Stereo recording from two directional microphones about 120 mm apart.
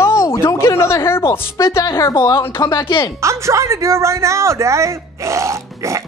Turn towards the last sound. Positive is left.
turn(degrees=-25)  # may be behind; listen again after turning